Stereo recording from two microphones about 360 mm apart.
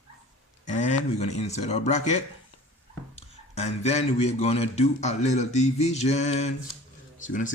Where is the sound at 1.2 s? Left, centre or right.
Centre.